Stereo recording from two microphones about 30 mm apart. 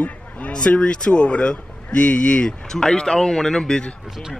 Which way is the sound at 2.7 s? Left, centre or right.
Centre.